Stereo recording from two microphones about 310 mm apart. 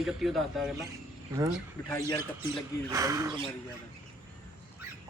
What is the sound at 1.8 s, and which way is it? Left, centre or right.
Speech, centre.